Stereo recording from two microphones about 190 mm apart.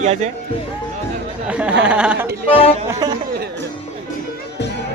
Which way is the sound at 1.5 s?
5° right (ahead or behind).